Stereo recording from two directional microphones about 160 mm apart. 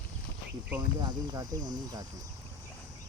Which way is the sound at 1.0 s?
25° right (ahead or behind).